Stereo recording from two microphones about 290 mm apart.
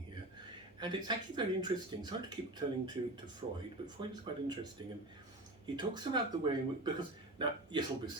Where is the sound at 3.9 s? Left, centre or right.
Centre.